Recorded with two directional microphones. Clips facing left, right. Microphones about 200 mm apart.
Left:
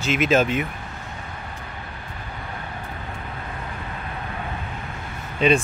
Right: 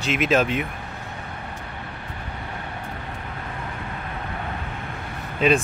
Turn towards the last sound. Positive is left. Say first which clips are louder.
# left 1 dB
turn(degrees=-5)  # may be behind; listen again after turning